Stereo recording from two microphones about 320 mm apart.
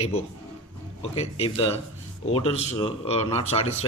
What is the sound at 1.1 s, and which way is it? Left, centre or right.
A man's voice, centre.